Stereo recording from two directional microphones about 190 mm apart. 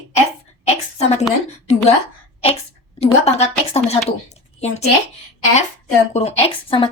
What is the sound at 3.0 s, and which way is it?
A woman's voice, 35° left (ahead or behind).